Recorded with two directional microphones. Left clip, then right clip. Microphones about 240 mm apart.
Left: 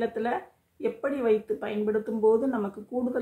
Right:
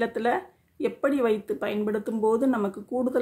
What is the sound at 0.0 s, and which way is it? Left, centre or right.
A woman's voice, right.